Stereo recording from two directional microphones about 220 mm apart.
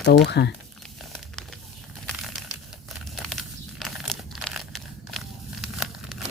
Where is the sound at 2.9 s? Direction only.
Centre (ahead or behind).